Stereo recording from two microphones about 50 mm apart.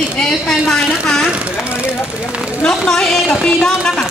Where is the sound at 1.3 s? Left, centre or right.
Right.